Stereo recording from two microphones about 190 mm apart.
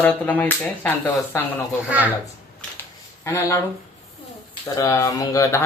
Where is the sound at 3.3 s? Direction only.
15° left (ahead or behind).